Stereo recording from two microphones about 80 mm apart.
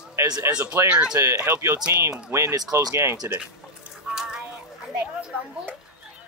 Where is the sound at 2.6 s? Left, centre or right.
Right.